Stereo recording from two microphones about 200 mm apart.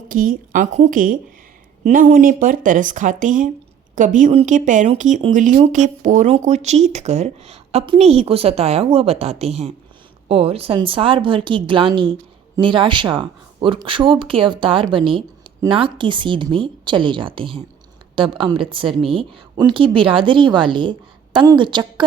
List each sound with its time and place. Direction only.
0.1 s a woman's voice: 45° right (ahead or behind); by 22.0 s 25° right (ahead or behind)